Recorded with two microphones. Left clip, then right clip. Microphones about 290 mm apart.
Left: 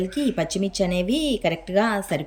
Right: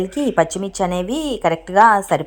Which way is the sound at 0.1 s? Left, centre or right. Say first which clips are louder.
Right 7 dB; centre.